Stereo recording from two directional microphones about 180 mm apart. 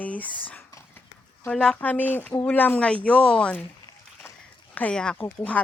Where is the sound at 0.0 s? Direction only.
10° left (ahead or behind).